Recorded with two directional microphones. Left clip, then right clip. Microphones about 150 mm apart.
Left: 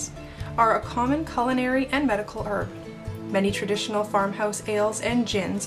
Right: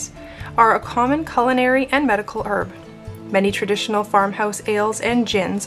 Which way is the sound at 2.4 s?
35° right (ahead or behind).